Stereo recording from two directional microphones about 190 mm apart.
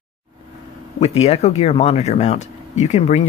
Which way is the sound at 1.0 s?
35° left (ahead or behind).